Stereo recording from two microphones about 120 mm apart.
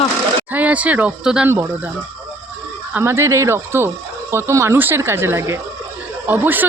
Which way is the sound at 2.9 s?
20° right (ahead or behind).